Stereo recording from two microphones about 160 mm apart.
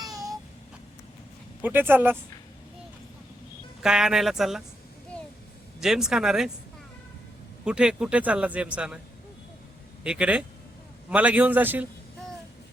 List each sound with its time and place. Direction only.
0.0 s vehicle: 20° right (ahead or behind)
1.6 s a man's voice: 10° right (ahead or behind)
3.8 s speech: 5° right (ahead or behind)
5.8 s speech: 5° right (ahead or behind)
7.6 s a man's voice: 5° right (ahead or behind)
10.0 s a man's voice: 5° right (ahead or behind)